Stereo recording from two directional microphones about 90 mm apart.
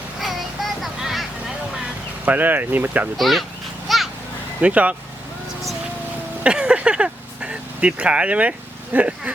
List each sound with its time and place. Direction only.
0.2 s vehicle: centre (ahead or behind)
2.2 s speech: 20° right (ahead or behind)
3.2 s speech: centre (ahead or behind)
3.8 s a sound: centre (ahead or behind)
4.6 s speech: 15° right (ahead or behind)
6.4 s vehicle: 10° right (ahead or behind)